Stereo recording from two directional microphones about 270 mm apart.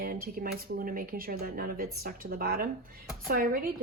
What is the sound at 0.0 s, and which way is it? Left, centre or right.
Speech, right.